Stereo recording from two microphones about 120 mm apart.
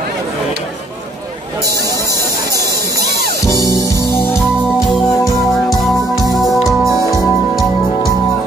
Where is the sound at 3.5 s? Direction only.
25° left (ahead or behind).